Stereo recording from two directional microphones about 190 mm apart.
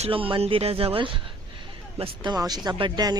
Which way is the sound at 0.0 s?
30° right (ahead or behind).